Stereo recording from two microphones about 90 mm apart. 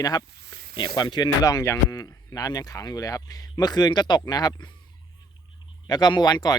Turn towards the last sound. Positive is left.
turn(degrees=50)  # may be behind; listen again after turning